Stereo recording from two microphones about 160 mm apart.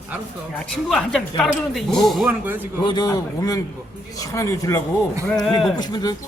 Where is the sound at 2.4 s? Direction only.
10° right (ahead or behind).